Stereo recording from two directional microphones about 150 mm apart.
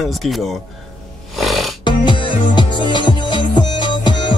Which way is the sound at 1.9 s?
35° left (ahead or behind).